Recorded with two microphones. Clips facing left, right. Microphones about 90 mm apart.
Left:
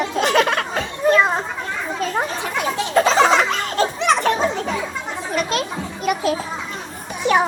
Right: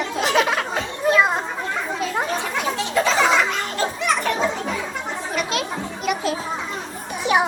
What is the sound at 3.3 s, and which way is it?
Laughter, 75° left (ahead or behind).